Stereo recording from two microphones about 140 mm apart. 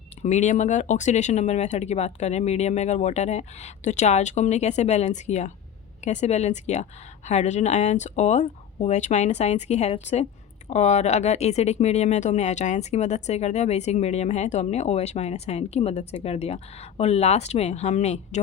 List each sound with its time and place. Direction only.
0.2 s speech: 55° left (ahead or behind)